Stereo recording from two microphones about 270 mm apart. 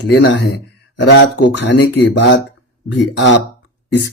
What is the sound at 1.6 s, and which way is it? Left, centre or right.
Speech, left.